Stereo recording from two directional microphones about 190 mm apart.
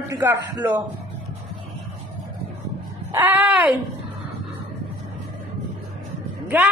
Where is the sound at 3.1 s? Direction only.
10° right (ahead or behind).